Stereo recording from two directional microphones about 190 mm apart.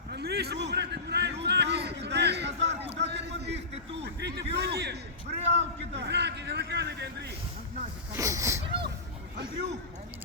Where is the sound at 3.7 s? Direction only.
30° right (ahead or behind).